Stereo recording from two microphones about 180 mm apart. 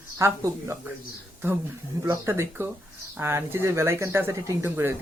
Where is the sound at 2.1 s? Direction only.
15° right (ahead or behind).